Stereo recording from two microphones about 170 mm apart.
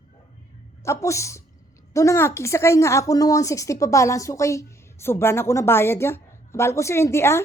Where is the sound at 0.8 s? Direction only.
15° left (ahead or behind).